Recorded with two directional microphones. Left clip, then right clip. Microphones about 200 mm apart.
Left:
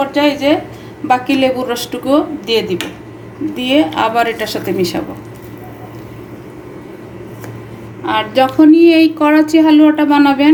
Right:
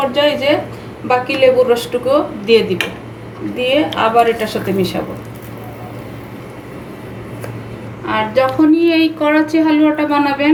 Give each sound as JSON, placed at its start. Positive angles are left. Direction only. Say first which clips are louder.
{"t": 0.1, "sound": "speech", "louder": "left 1 dB", "side_deg": 55}
{"t": 8.0, "sound": "speech", "louder": "left 1 dB", "side_deg": 50}